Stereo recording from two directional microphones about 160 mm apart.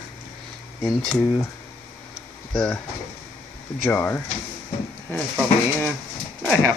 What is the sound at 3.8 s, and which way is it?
Speech, 15° left (ahead or behind).